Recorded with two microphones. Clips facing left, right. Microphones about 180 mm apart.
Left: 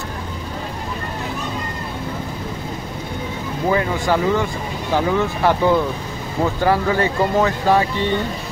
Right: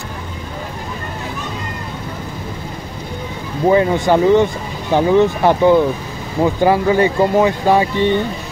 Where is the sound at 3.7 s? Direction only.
25° right (ahead or behind).